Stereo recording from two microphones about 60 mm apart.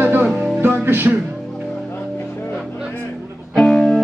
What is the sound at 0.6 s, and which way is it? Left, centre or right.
Music, right.